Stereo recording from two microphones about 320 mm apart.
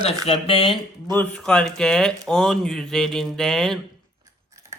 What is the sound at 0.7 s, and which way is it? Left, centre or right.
Speech, centre.